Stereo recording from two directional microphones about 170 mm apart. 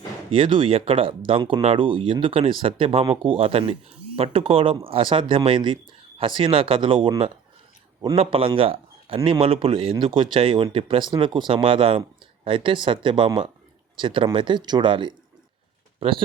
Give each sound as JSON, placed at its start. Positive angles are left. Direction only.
{"t": 0.3, "sound": "speech", "side_deg": -30}